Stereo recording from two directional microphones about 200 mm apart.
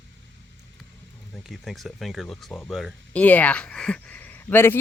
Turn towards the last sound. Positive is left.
turn(degrees=10)  # may be behind; listen again after turning